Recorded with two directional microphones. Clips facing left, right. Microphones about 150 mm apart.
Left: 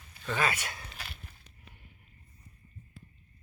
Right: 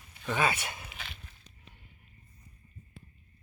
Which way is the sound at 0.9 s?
Centre (ahead or behind).